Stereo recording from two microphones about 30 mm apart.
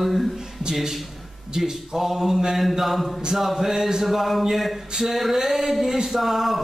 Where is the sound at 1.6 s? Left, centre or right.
Centre.